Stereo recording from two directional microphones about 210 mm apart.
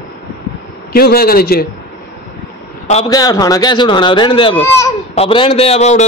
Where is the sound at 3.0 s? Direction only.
20° left (ahead or behind).